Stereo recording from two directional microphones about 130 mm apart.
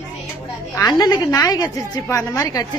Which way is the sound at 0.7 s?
30° left (ahead or behind).